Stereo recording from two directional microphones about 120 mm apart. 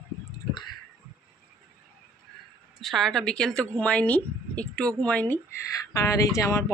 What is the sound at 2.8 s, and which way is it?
A woman's voice, centre (ahead or behind).